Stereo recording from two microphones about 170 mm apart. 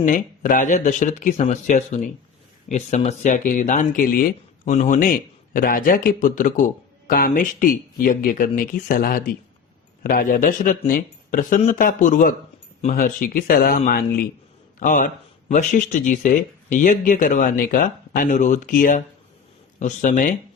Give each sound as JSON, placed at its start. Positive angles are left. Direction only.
{"t": 0.0, "sound": "a man's voice", "side_deg": 50}